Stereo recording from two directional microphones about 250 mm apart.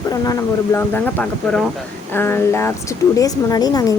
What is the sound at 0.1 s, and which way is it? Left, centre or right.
Speech, centre.